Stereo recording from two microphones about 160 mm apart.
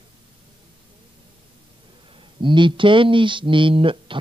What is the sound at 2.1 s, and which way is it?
Speech, 30° right (ahead or behind).